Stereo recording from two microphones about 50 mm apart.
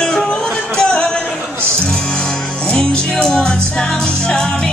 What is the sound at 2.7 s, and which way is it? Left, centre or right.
Music, centre.